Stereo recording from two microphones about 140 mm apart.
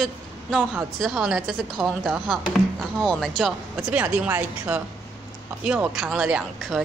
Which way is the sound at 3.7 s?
10° right (ahead or behind).